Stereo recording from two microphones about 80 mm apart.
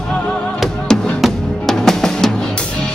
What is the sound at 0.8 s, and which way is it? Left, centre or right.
Music, centre.